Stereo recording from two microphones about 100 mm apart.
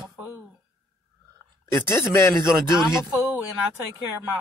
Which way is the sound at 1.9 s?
25° left (ahead or behind).